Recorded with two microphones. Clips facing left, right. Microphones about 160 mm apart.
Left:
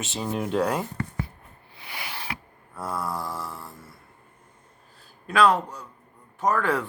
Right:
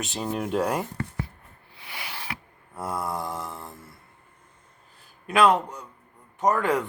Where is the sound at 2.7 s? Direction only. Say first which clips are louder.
Right 1 dB; 20° right (ahead or behind).